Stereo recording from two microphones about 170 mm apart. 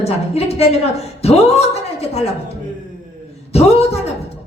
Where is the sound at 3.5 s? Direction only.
35° left (ahead or behind).